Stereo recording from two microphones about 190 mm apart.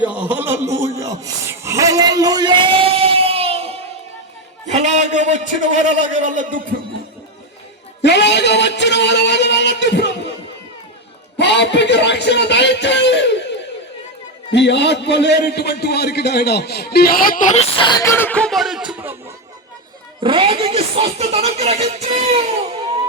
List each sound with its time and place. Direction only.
0.1 s a sound: 10° right (ahead or behind); by 5.6 s 40° right (ahead or behind)
6.1 s a man's voice: 40° right (ahead or behind)
8.0 s a man's voice: 65° left (ahead or behind)
11.3 s a man's voice: 65° left (ahead or behind); by 17.9 s 30° left (ahead or behind)
18.0 s speech: 10° left (ahead or behind); by 19.1 s 5° right (ahead or behind)
20.2 s speech: 30° right (ahead or behind)